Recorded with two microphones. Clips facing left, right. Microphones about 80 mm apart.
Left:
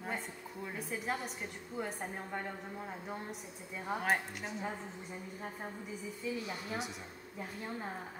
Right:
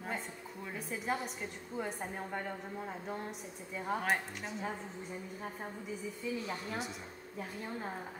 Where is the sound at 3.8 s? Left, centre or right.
Centre.